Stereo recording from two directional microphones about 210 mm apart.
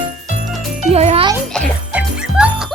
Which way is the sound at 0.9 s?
30° right (ahead or behind).